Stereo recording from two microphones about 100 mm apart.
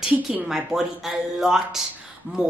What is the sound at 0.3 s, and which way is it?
A woman's voice, 5° right (ahead or behind).